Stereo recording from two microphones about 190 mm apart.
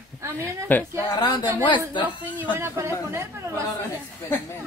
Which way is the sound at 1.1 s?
20° left (ahead or behind).